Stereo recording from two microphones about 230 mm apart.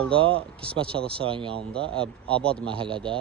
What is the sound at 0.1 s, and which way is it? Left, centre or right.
Speech, right.